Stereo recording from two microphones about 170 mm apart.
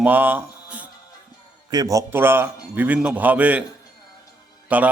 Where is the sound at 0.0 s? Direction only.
10° right (ahead or behind).